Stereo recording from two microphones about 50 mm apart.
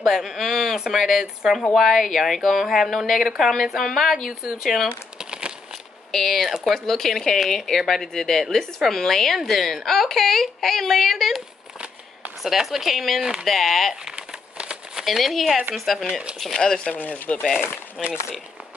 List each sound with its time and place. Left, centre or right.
0.0 s a woman's voice: centre
4.3 s speech: centre
5.2 s crumpling: centre
6.1 s a woman's voice: centre
12.4 s a woman's voice: centre
13.2 s speech: centre
13.5 s a woman's voice: centre
14.0 s crumpling: centre
15.0 s a woman's voice: centre
16.5 s speech: centre
16.9 s speech: left
18.0 s a woman's voice: centre